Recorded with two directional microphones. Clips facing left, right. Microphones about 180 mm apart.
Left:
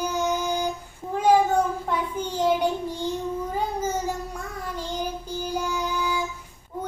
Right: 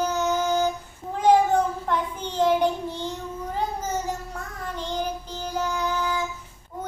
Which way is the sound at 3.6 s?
10° left (ahead or behind).